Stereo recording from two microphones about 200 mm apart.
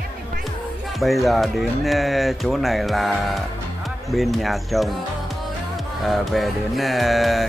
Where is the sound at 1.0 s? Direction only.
Centre (ahead or behind).